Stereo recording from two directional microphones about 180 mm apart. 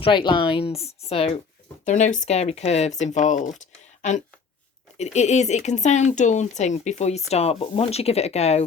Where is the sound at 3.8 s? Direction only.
40° left (ahead or behind).